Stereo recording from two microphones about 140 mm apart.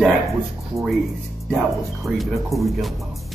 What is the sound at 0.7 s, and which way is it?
Speech, 20° right (ahead or behind).